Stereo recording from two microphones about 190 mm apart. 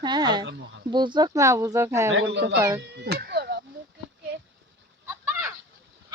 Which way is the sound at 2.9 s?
60° right (ahead or behind).